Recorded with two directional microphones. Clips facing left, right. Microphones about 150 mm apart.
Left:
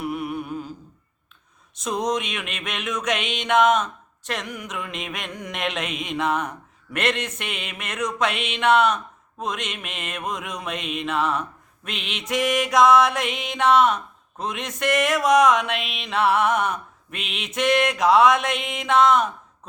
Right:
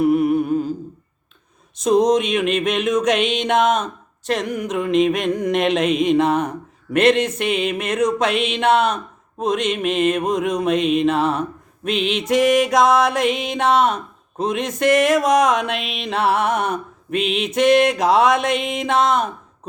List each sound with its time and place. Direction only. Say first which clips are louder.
0.0 s music: right 12 dB; 40° right (ahead or behind)
1.8 s music: right 10 dB; 35° right (ahead or behind)